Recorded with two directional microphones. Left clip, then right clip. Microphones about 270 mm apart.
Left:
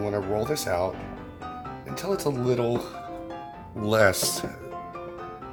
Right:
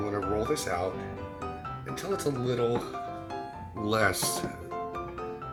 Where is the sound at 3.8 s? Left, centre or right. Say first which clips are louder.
Left 6 dB; left.